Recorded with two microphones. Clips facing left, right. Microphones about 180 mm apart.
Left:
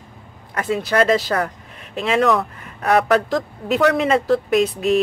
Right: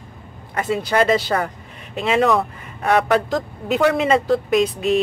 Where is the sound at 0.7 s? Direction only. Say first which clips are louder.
Left 1 dB; centre (ahead or behind).